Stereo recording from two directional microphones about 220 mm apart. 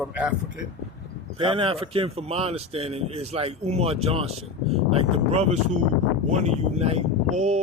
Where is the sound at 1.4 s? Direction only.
25° right (ahead or behind).